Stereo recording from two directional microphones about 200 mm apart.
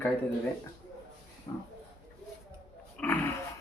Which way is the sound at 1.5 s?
25° left (ahead or behind).